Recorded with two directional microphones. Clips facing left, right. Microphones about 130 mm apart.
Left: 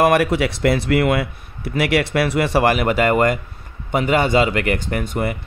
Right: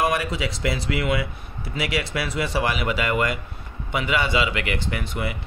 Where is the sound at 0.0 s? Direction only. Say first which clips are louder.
Left 8 dB; 65° left (ahead or behind).